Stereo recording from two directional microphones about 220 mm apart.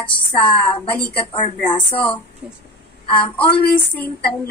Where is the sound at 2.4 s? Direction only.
5° right (ahead or behind).